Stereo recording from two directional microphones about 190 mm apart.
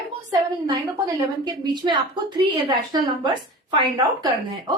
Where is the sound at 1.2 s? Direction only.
20° right (ahead or behind).